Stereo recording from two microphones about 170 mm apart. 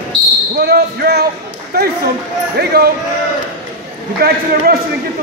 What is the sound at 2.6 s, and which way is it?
Basketball bounce, 70° right (ahead or behind).